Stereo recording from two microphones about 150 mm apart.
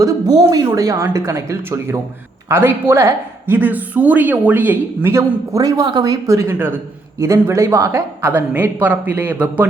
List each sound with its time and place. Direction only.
0.0 s a woman's voice: 25° right (ahead or behind)